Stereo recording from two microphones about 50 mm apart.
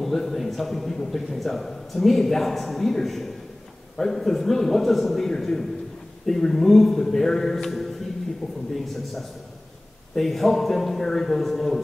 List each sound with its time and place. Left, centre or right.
0.0 s a man's voice: centre
8.4 s a man's voice: centre
8.7 s a man's voice: centre